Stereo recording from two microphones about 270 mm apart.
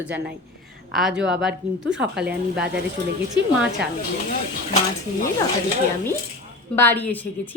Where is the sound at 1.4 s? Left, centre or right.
Centre.